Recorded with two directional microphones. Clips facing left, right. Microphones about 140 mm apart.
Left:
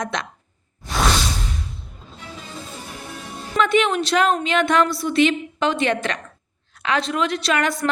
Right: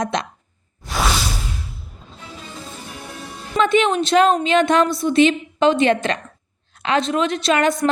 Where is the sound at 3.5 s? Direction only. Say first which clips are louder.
Right 2 dB; 20° right (ahead or behind).